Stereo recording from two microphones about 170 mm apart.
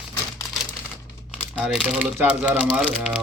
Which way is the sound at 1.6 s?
5° right (ahead or behind).